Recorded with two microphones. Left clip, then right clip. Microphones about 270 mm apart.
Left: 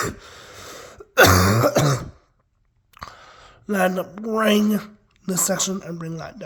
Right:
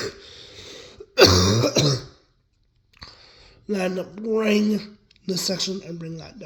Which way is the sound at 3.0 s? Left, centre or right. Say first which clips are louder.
Left 6 dB; left.